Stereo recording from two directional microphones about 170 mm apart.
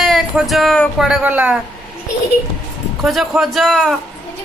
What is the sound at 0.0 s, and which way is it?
Speech, centre (ahead or behind).